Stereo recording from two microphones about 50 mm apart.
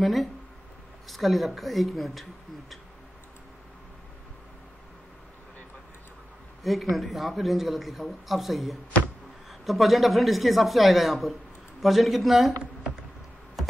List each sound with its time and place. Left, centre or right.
0.0 s a man's voice: centre
6.6 s a man's voice: centre
13.6 s computer keyboard: centre